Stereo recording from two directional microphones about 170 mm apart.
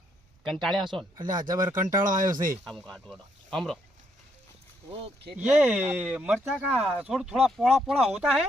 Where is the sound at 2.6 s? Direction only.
5° left (ahead or behind).